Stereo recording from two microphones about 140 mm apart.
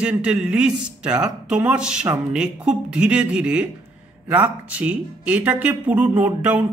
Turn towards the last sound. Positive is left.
turn(degrees=-10)  # may be behind; listen again after turning